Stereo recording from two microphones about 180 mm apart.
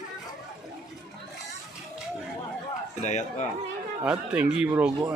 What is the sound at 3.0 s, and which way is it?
Speech, 40° left (ahead or behind).